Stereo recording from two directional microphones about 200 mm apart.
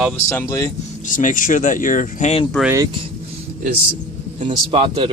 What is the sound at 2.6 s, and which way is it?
Speech, 15° right (ahead or behind).